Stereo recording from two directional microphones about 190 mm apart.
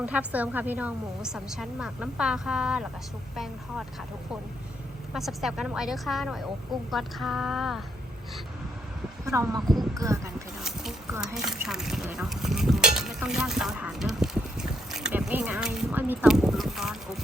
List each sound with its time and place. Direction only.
0.0 s a woman's voice: 5° right (ahead or behind)
5.1 s a woman's voice: centre (ahead or behind)
9.2 s speech: 15° right (ahead or behind)
10.6 s a sound: centre (ahead or behind)
11.4 s a woman's voice: centre (ahead or behind)